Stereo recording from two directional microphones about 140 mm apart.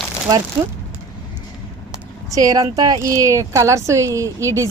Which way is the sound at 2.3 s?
25° right (ahead or behind).